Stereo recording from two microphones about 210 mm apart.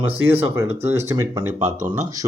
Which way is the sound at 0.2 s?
70° right (ahead or behind).